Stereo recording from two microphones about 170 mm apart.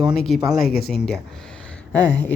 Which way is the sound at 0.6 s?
65° left (ahead or behind).